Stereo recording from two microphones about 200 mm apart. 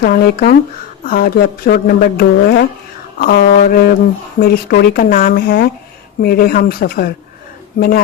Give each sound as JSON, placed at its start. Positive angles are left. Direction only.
{"t": 0.0, "sound": "speech", "side_deg": 50}